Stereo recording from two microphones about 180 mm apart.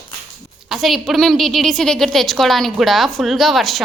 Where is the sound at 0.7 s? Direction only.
Centre (ahead or behind).